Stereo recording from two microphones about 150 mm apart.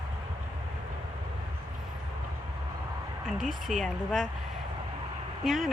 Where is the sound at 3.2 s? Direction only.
Centre (ahead or behind).